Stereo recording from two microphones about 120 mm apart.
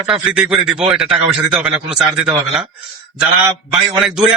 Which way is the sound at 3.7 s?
5° right (ahead or behind).